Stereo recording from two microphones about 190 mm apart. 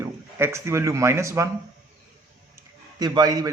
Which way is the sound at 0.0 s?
15° right (ahead or behind).